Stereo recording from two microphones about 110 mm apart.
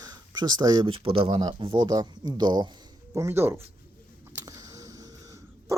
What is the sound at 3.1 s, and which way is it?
Speech, 25° right (ahead or behind).